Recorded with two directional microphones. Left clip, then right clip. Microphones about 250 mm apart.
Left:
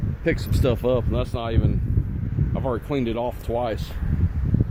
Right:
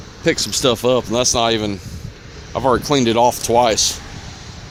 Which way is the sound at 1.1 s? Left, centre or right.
Right.